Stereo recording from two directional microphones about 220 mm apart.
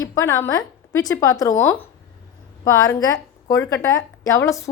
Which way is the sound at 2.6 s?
15° left (ahead or behind).